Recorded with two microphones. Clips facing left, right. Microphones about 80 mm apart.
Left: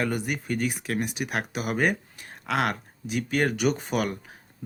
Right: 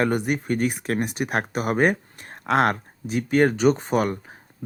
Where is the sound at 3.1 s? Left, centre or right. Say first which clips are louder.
Right 6 dB; right.